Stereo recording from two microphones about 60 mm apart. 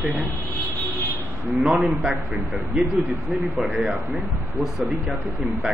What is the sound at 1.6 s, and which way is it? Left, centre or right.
Speech, centre.